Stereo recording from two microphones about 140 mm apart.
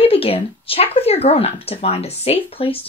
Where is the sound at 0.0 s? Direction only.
45° left (ahead or behind).